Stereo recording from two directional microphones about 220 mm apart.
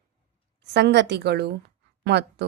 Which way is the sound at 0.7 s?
50° right (ahead or behind).